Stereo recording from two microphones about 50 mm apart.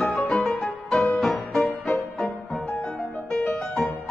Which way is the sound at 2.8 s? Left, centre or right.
Left.